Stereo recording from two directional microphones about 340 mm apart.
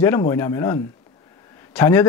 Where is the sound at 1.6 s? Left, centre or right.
Centre.